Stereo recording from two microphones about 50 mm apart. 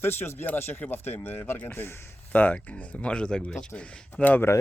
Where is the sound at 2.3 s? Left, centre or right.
Left.